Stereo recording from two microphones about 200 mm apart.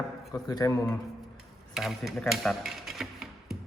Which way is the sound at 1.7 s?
Centre (ahead or behind).